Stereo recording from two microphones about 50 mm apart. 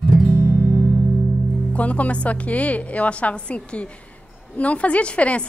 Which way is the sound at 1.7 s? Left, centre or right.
Left.